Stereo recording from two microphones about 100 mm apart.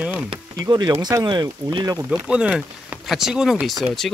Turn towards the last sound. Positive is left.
turn(degrees=5)  # may be behind; listen again after turning